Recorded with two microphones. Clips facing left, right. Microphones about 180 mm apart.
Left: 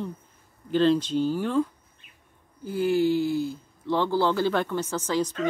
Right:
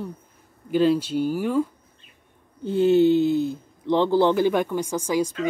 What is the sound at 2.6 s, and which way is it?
Speech, 25° right (ahead or behind).